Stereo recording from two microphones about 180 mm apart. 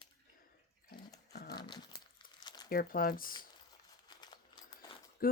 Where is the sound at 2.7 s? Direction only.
55° left (ahead or behind).